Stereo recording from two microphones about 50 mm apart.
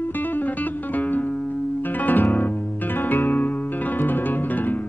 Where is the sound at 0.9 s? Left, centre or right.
Left.